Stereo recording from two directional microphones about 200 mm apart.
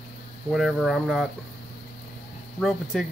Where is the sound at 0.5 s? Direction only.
Centre (ahead or behind).